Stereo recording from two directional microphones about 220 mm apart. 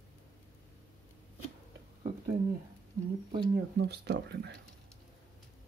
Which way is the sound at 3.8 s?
50° right (ahead or behind).